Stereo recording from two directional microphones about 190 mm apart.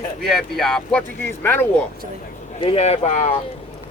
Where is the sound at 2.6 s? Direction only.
30° left (ahead or behind).